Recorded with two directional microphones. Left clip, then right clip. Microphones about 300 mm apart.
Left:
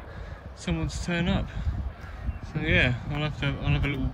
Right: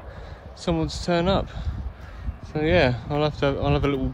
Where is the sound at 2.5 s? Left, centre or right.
Centre.